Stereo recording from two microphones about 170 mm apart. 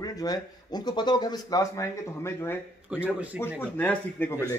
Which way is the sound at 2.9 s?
5° right (ahead or behind).